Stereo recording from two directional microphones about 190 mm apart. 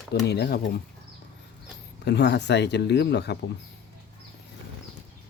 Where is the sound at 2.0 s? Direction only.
65° left (ahead or behind).